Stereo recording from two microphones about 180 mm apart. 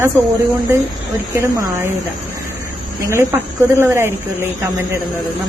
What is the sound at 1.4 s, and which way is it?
Speech, 15° right (ahead or behind).